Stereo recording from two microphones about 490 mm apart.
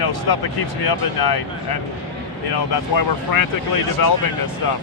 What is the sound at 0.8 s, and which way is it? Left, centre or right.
Speech, left.